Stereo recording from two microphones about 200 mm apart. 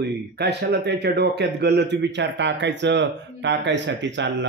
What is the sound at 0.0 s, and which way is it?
Speech, 55° right (ahead or behind).